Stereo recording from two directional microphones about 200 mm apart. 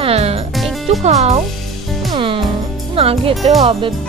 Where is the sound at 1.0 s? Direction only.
35° right (ahead or behind).